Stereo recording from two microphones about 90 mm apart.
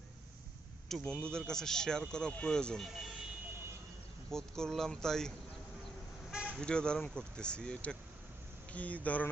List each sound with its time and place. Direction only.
0.9 s a man's voice: 5° left (ahead or behind)
4.3 s speech: 5° left (ahead or behind)
6.3 s vehicle: 10° right (ahead or behind)
6.6 s speech: 10° left (ahead or behind)